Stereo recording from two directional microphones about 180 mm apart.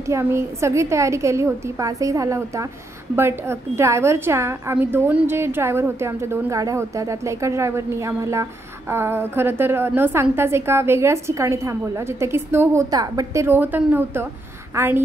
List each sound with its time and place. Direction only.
0.1 s a woman's voice: 15° right (ahead or behind)